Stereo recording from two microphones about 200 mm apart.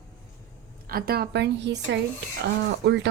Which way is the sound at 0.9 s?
50° right (ahead or behind).